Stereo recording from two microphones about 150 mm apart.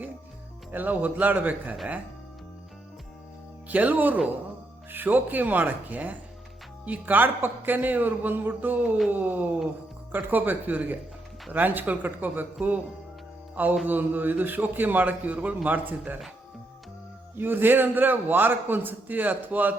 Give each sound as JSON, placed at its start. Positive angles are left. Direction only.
{"t": 0.7, "sound": "a man's voice", "side_deg": -10}
{"t": 3.7, "sound": "a man's voice", "side_deg": -10}
{"t": 13.8, "sound": "a man's voice", "side_deg": -10}
{"t": 17.3, "sound": "a man's voice", "side_deg": -15}